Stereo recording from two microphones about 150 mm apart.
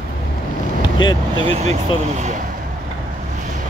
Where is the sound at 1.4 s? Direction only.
45° right (ahead or behind).